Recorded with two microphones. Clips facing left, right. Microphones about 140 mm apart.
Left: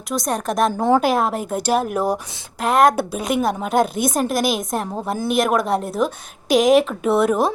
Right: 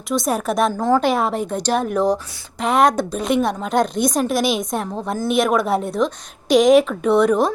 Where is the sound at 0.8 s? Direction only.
20° left (ahead or behind).